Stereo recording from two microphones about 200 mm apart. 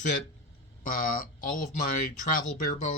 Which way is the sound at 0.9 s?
45° left (ahead or behind).